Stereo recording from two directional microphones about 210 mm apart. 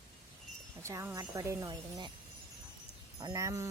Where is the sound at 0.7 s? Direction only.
15° right (ahead or behind).